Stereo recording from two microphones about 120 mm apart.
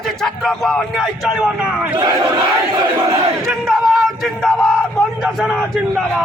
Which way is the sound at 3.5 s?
Centre (ahead or behind).